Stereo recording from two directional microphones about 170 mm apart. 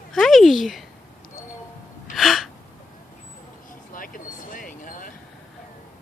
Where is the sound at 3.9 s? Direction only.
55° left (ahead or behind).